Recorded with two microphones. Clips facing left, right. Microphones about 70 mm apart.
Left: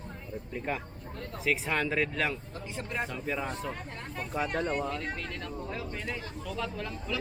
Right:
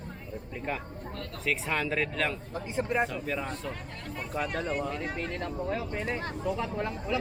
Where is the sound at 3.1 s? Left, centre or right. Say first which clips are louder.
Even; centre.